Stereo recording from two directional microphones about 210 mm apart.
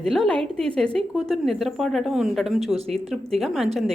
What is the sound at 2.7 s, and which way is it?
Speech, 30° right (ahead or behind).